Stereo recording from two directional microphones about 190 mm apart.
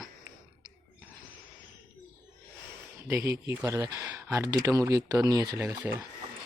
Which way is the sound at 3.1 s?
15° right (ahead or behind).